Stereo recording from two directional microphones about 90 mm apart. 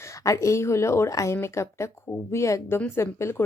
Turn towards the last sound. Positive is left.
turn(degrees=30)  # may be behind; listen again after turning